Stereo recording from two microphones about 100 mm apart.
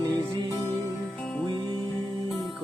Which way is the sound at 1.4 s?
45° right (ahead or behind).